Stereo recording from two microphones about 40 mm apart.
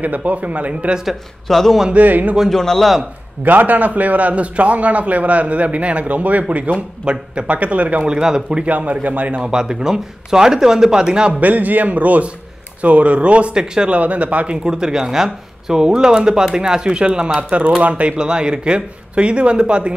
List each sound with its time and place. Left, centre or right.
0.0 s a man's voice: right
1.0 s speech: centre
2.0 s a man's voice: right
2.5 s a man's voice: centre
3.4 s a man's voice: right
8.1 s speech: centre
8.6 s a man's voice: right
9.4 s speech: centre
11.3 s a man's voice: right
13.9 s a man's voice: right
14.6 s a man's voice: centre; by 18.1 s right
18.1 s speech: right